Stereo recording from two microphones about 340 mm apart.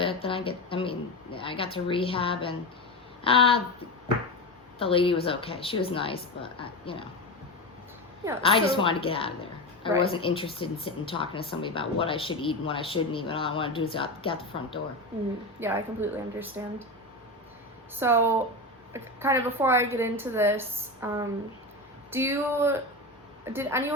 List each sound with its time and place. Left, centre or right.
0.0 s a woman's voice: centre
4.8 s speech: centre
8.4 s speech: centre
15.6 s a woman's voice: centre
17.9 s a woman's voice: centre